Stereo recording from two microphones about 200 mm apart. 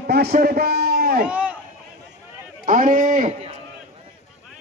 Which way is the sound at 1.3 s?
5° right (ahead or behind).